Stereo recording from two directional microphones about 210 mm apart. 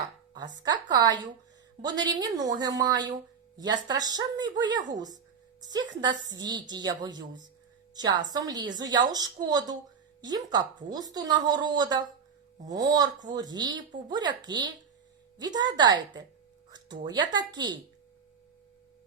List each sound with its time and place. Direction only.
0.3 s a woman's voice: 20° right (ahead or behind)